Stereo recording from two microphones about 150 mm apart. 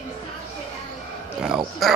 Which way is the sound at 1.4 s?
Centre (ahead or behind).